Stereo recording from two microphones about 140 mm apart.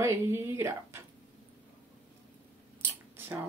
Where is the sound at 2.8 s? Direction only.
15° right (ahead or behind).